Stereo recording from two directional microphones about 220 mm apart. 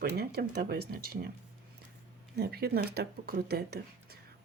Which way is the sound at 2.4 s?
45° right (ahead or behind).